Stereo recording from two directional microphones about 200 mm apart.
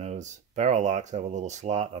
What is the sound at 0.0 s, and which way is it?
Speech, 35° right (ahead or behind).